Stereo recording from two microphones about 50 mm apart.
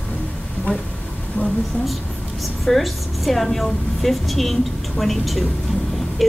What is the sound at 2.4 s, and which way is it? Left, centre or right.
A woman's voice, centre.